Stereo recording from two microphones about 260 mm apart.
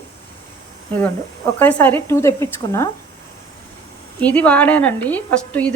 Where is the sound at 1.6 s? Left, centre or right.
Centre.